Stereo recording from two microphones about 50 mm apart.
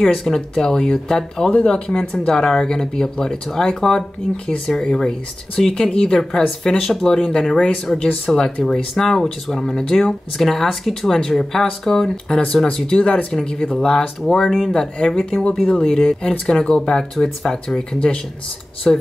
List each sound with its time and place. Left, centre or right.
0.0 s speech: centre
7.5 s speech: left
7.8 s speech: centre
12.6 s speech: left; by 19.0 s centre